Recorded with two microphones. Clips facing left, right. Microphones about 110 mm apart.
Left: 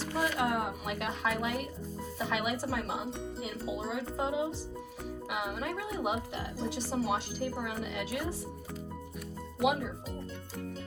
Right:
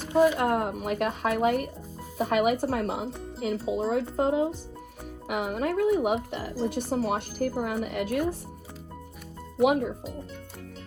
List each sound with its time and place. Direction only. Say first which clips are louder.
0.0 s a sound: right 11 dB; 15° right (ahead or behind)
0.3 s speech: right 5 dB; 50° right (ahead or behind)
9.6 s speech: right 6 dB; 50° right (ahead or behind)